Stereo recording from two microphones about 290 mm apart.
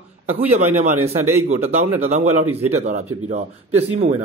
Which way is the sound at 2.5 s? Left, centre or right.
Right.